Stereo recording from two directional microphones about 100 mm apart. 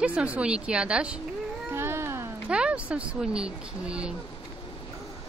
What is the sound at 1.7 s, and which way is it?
Cat, 25° right (ahead or behind).